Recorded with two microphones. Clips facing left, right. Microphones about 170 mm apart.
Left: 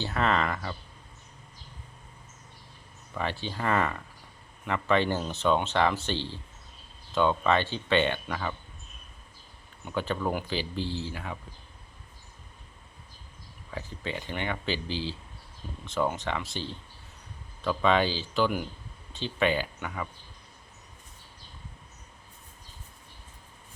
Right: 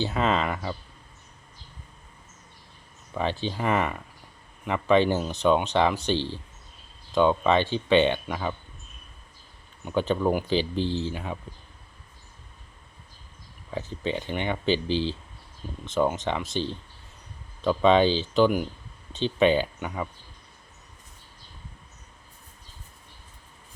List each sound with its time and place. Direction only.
0.0 s speech: 15° right (ahead or behind)
3.2 s speech: 20° right (ahead or behind)
9.8 s speech: 20° right (ahead or behind)
13.7 s speech: 20° right (ahead or behind)